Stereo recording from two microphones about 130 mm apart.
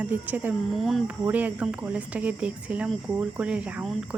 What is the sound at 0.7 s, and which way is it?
Speech, centre (ahead or behind).